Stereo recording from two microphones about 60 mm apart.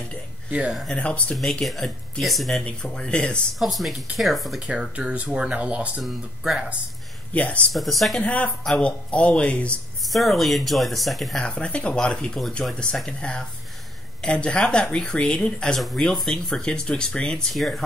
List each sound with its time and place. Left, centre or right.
0.5 s speech: centre
0.9 s speech: left
1.3 s speech: centre
2.8 s speech: centre
3.5 s speech: centre
4.6 s speech: centre
6.0 s speech: centre
7.3 s speech: left
7.7 s speech: centre
8.2 s speech: left
10.0 s speech: centre
11.3 s speech: centre